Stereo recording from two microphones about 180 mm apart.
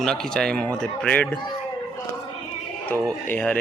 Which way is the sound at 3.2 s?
5° left (ahead or behind).